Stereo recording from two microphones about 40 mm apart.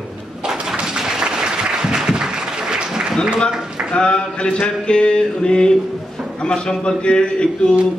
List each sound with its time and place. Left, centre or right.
0.5 s applause: centre
3.9 s mantra: left